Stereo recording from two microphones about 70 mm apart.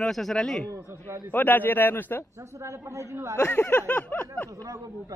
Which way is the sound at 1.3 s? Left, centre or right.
Left.